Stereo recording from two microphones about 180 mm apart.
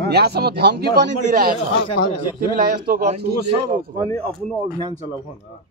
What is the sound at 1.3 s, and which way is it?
Speech, 55° right (ahead or behind).